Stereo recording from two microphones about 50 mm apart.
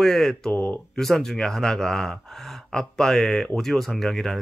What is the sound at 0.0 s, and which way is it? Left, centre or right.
Speech, centre.